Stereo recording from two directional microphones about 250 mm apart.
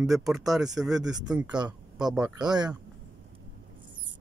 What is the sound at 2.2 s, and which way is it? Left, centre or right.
Speech, centre.